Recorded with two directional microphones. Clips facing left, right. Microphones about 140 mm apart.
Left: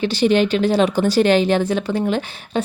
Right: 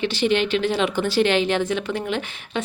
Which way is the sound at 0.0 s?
40° left (ahead or behind).